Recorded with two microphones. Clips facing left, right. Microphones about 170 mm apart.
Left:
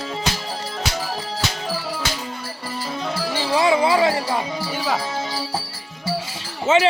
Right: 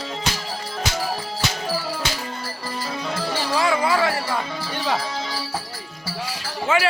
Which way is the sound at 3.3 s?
20° left (ahead or behind).